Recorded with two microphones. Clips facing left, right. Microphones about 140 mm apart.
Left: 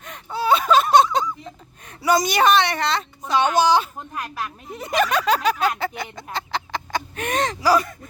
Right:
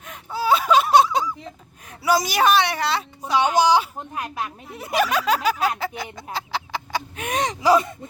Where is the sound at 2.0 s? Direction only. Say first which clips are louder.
Left 1 dB; 5° right (ahead or behind); by 4.5 s 20° right (ahead or behind).